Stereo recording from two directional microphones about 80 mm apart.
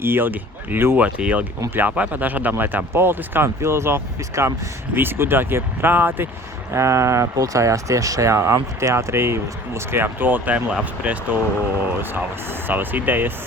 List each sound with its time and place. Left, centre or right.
0.0 s speech: right
6.7 s speech: right; by 11.3 s centre
12.5 s speech: right